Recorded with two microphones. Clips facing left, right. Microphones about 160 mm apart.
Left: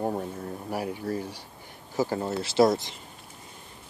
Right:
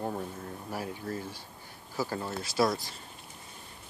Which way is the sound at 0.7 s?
15° left (ahead or behind).